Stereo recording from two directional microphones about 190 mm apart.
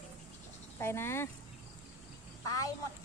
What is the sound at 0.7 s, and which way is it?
Speech, 15° left (ahead or behind).